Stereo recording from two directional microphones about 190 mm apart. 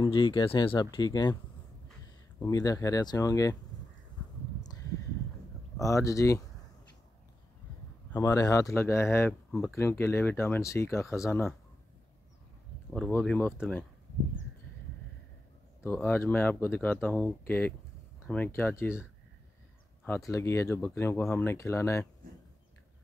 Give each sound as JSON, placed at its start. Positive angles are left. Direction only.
{"t": 0.0, "sound": "speech", "side_deg": 25}
{"t": 2.4, "sound": "speech", "side_deg": 20}
{"t": 5.8, "sound": "speech", "side_deg": 15}
{"t": 8.1, "sound": "speech", "side_deg": 15}
{"t": 12.9, "sound": "speech", "side_deg": 5}
{"t": 15.8, "sound": "speech", "side_deg": 10}
{"t": 20.1, "sound": "speech", "side_deg": 15}